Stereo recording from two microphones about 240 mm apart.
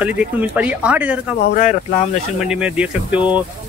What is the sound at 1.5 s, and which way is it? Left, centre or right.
Speech, left.